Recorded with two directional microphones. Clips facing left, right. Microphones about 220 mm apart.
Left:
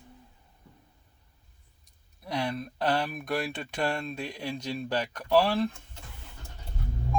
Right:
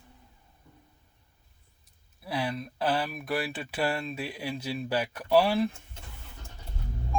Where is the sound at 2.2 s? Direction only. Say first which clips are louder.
Even; 5° right (ahead or behind).